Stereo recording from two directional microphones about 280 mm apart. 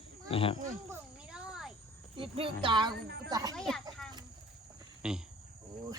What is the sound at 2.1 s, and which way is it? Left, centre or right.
Speech, centre.